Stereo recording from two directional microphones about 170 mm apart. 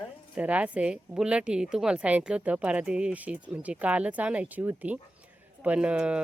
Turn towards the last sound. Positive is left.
turn(degrees=-5)  # may be behind; listen again after turning